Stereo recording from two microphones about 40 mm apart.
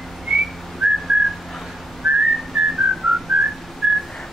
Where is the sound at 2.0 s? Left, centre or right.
Centre.